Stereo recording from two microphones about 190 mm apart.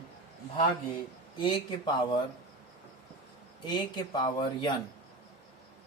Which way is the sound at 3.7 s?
25° left (ahead or behind).